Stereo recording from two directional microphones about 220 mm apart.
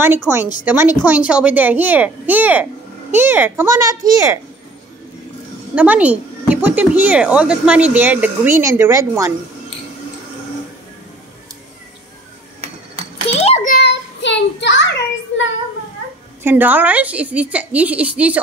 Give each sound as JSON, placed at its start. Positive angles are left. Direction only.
{"t": 0.3, "sound": "a child's voice", "side_deg": -10}
{"t": 5.8, "sound": "a child's voice", "side_deg": -5}
{"t": 13.3, "sound": "a sound", "side_deg": 30}
{"t": 13.7, "sound": "child singing", "side_deg": 55}
{"t": 16.4, "sound": "a child's voice", "side_deg": -10}